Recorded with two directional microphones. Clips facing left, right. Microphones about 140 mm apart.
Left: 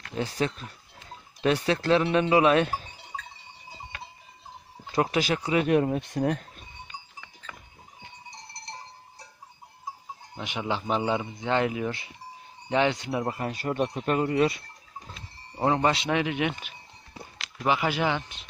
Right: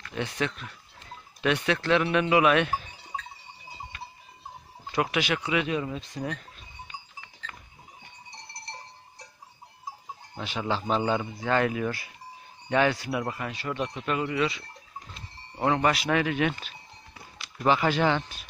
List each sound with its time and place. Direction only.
0.1 s speech: 35° left (ahead or behind)
4.9 s speech: 35° left (ahead or behind)
5.7 s speech: 60° left (ahead or behind)
10.3 s speech: 15° left (ahead or behind)
13.5 s speech: 45° left (ahead or behind)
15.6 s speech: 25° left (ahead or behind)